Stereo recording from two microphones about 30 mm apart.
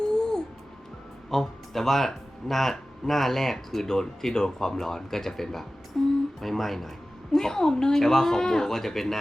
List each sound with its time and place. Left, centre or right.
0.1 s music: left
1.3 s speech: centre
6.0 s a sound: centre
6.4 s speech: centre
7.3 s a woman's voice: centre